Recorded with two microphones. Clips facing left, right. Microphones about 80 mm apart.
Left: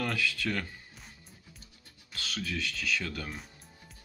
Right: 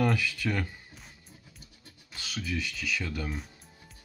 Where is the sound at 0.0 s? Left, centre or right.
Centre.